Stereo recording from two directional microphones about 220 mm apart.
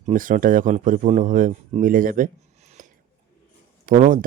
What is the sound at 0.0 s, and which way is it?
A man's voice, 35° right (ahead or behind).